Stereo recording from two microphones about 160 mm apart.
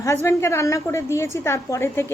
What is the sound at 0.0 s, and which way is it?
A woman's voice, 15° left (ahead or behind).